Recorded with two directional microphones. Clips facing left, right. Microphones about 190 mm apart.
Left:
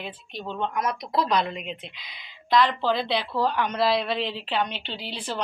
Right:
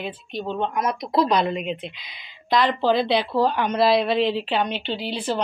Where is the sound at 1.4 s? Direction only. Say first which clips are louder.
Right 6 dB; 10° right (ahead or behind).